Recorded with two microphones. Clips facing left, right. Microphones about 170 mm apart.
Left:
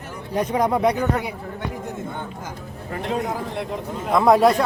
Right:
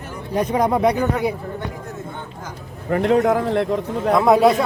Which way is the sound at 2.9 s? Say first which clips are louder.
Right 9 dB; 70° right (ahead or behind).